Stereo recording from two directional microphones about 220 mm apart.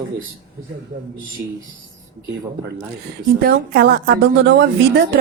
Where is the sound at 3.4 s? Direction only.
45° right (ahead or behind).